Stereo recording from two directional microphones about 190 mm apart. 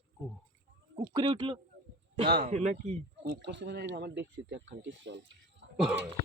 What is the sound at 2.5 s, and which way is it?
Speech, 35° right (ahead or behind).